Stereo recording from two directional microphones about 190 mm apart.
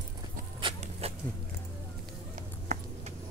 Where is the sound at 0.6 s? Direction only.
30° right (ahead or behind).